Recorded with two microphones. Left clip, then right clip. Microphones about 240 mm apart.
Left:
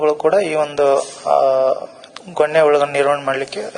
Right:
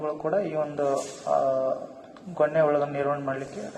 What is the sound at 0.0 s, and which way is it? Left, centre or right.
A man's voice, left.